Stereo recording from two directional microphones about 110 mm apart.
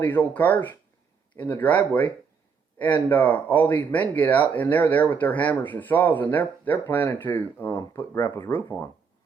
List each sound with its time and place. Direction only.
0.0 s speech: 15° left (ahead or behind)